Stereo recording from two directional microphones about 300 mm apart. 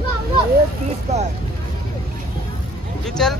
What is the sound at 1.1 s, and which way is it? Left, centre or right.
Speech, right.